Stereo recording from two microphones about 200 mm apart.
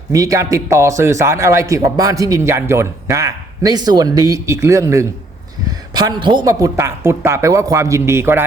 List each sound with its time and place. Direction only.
0.1 s a man's voice: 15° right (ahead or behind)